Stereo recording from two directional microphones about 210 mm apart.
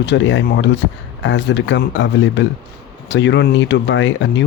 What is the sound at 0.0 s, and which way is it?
Speech, 55° left (ahead or behind).